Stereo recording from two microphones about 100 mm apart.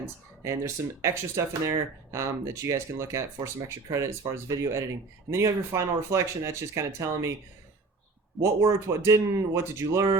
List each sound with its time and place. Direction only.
0.0 s speech: 30° right (ahead or behind)
8.4 s speech: 30° right (ahead or behind)